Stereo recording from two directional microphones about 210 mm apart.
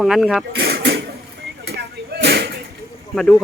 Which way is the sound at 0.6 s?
55° right (ahead or behind).